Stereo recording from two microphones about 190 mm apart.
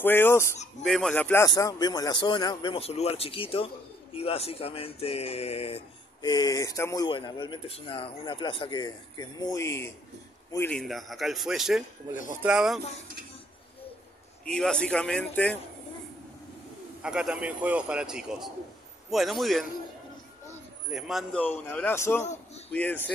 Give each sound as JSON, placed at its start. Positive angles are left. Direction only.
{"t": 0.0, "sound": "speech", "side_deg": 10}
{"t": 0.8, "sound": "a man's voice", "side_deg": 0}
{"t": 14.4, "sound": "a man's voice", "side_deg": 5}
{"t": 17.0, "sound": "a man's voice", "side_deg": -5}
{"t": 20.9, "sound": "speech", "side_deg": 0}
{"t": 22.2, "sound": "a man's voice", "side_deg": 40}
{"t": 22.7, "sound": "speech", "side_deg": 10}